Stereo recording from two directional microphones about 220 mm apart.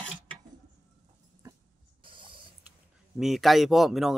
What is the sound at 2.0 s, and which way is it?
Owl, 20° right (ahead or behind).